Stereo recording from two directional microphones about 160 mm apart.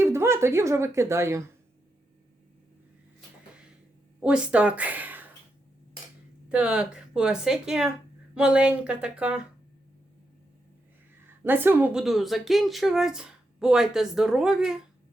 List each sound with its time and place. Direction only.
0.0 s speech: 15° right (ahead or behind)
4.2 s speech: 5° right (ahead or behind)
6.5 s a woman's voice: 5° right (ahead or behind)
11.4 s speech: 10° right (ahead or behind)